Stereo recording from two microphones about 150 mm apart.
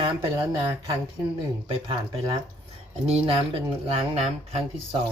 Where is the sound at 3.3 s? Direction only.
40° right (ahead or behind).